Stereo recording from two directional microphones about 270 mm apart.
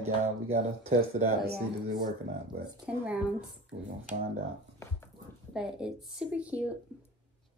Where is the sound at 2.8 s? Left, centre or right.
Centre.